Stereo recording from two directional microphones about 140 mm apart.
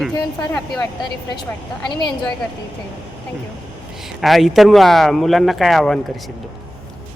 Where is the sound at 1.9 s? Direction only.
35° left (ahead or behind).